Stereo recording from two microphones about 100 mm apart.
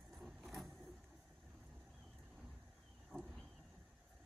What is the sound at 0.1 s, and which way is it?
Vehicle, centre (ahead or behind).